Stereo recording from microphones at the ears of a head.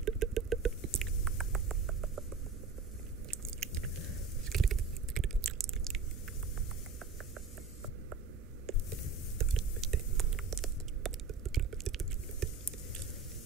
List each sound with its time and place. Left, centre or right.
0.0 s rodents: right
3.3 s biting: right
9.4 s a sound: right